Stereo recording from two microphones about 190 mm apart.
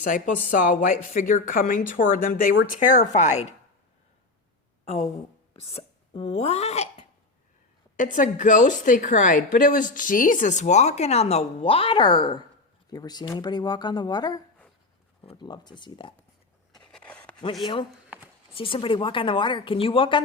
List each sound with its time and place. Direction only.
0.0 s a woman's voice: 45° left (ahead or behind)
5.6 s a woman's voice: 30° left (ahead or behind)
16.7 s a sound: 5° left (ahead or behind)
18.5 s a woman's voice: 30° left (ahead or behind)